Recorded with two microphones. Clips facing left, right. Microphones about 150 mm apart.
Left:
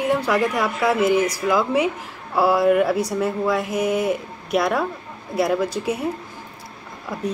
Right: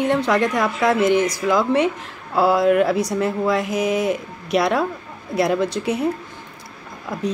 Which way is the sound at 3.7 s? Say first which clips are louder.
Right 1 dB; 80° right.